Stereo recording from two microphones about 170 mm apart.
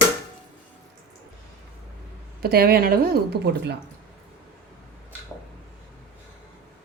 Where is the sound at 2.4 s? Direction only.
65° right (ahead or behind).